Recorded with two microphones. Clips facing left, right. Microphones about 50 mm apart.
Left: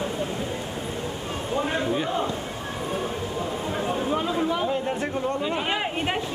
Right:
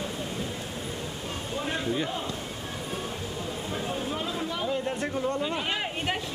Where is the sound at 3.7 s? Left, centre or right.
Centre.